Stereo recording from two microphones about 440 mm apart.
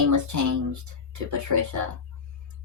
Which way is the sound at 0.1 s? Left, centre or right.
Right.